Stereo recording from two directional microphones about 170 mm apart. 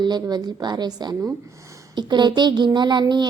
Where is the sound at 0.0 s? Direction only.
25° right (ahead or behind).